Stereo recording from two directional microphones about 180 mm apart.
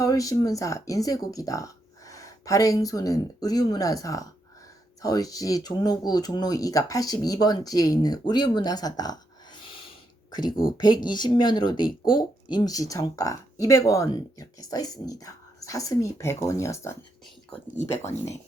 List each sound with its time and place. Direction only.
0.0 s speech: 20° left (ahead or behind)
10.5 s speech: 50° left (ahead or behind)
10.8 s speech: 25° left (ahead or behind)